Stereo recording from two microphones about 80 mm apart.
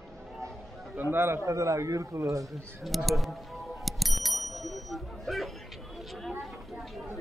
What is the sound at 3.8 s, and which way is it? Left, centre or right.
Bicycle bell, centre.